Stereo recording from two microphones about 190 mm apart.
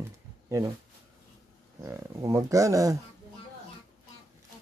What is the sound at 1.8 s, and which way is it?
Speech, 15° right (ahead or behind).